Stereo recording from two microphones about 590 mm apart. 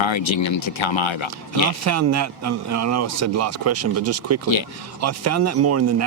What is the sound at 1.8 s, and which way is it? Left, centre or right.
Speech, right.